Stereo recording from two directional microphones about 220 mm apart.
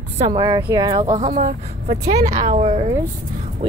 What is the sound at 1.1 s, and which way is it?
A woman's voice, 30° right (ahead or behind).